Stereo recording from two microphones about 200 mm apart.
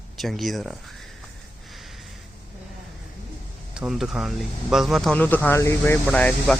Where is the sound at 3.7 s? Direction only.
5° right (ahead or behind).